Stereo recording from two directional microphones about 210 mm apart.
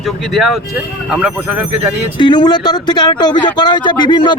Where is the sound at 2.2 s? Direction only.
20° left (ahead or behind).